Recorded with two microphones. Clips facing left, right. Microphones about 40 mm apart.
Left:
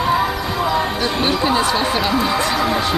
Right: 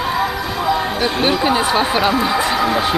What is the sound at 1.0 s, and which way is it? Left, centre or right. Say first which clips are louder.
Speech: right 2 dB; centre.